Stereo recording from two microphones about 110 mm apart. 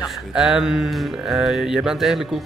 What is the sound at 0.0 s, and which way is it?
Speech, centre (ahead or behind).